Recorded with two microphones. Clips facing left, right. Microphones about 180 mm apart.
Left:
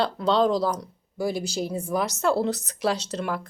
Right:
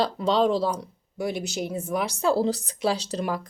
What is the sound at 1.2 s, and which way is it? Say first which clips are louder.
A woman's voice: left 1 dB; centre (ahead or behind).